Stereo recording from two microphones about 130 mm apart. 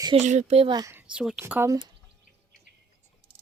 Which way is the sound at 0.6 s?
35° right (ahead or behind).